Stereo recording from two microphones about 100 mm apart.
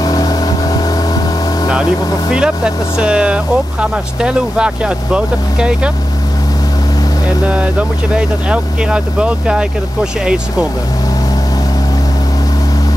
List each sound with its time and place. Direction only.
0.0 s vehicle: 40° left (ahead or behind)
2.3 s speech: 10° right (ahead or behind)
7.4 s speech: 10° right (ahead or behind)